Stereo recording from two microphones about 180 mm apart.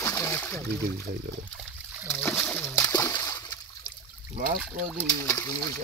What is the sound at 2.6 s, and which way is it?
Splash, 15° left (ahead or behind).